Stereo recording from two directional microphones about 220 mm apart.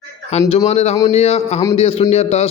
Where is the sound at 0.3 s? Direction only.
30° left (ahead or behind).